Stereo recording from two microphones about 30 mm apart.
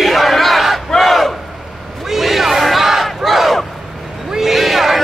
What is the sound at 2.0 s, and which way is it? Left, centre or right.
Battle cry, centre.